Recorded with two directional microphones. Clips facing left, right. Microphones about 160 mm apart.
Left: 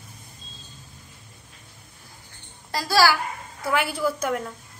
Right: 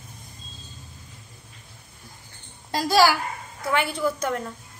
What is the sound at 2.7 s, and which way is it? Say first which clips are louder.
Speech: right 1 dB; 15° right (ahead or behind).